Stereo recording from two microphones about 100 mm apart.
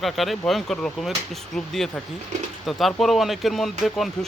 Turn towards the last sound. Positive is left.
turn(degrees=0)  # may be behind; listen again after turning